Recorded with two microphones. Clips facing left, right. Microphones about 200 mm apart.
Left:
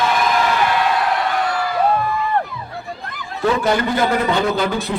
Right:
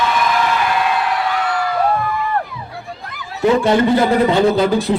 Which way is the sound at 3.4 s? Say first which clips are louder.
Right 5 dB; 25° right (ahead or behind).